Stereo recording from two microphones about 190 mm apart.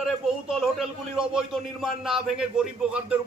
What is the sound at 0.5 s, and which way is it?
A man's voice, centre (ahead or behind).